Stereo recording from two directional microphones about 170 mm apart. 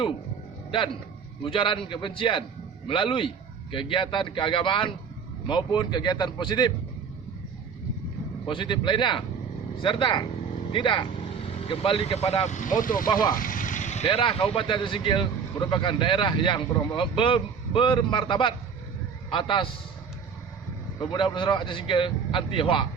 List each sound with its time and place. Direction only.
1.4 s speech: 30° left (ahead or behind)
8.4 s speech: 30° left (ahead or behind); by 13.1 s 55° left (ahead or behind)
13.1 s speech: 25° left (ahead or behind)
13.3 s vehicle: 55° left (ahead or behind)
14.1 s speech: 30° left (ahead or behind)
21.0 s speech: 25° left (ahead or behind)